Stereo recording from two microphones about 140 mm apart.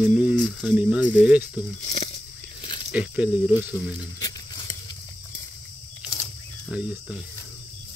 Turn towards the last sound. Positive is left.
turn(degrees=-5)  # may be behind; listen again after turning